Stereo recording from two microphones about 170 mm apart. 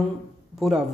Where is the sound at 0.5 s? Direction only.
Centre (ahead or behind).